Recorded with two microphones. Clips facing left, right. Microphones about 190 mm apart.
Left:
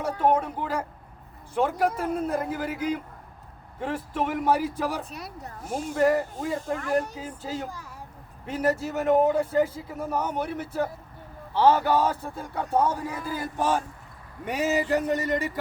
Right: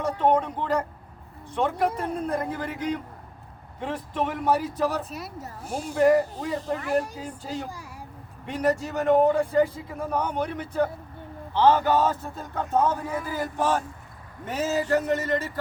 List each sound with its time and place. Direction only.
0.2 s a man's voice: 10° left (ahead or behind)
5.0 s speech: centre (ahead or behind)
5.6 s speech: 30° right (ahead or behind)
6.0 s speech: centre (ahead or behind)
7.2 s a man's voice: 5° left (ahead or behind)